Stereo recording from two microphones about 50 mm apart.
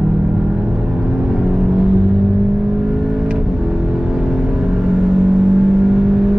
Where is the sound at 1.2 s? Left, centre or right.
Centre.